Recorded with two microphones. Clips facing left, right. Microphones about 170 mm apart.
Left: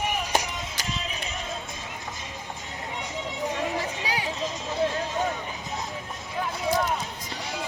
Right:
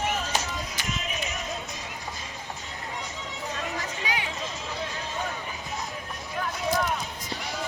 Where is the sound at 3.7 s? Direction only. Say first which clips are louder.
Left 2 dB; 35° left (ahead or behind).